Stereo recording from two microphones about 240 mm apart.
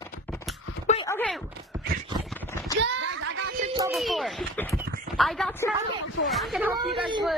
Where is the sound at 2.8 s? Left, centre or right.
Right.